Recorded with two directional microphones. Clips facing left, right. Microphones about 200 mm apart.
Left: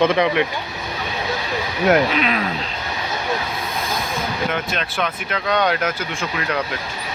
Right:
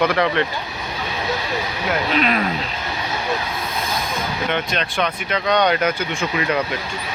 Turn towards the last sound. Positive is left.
turn(degrees=-5)  # may be behind; listen again after turning